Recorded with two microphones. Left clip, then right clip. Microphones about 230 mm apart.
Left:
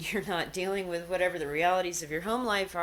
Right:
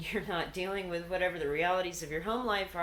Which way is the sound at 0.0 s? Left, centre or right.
Left.